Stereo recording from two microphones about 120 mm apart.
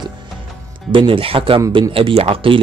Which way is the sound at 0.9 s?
45° right (ahead or behind).